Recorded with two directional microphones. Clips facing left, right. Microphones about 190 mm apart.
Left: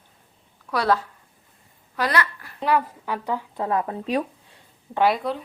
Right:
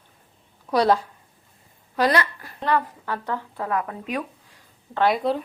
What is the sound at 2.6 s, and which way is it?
A woman's voice, 10° left (ahead or behind).